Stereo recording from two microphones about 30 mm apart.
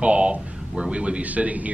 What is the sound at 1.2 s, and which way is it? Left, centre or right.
Speech, right.